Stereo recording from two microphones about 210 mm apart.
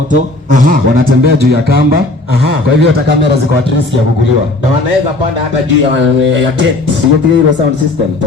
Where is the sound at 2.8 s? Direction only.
55° right (ahead or behind).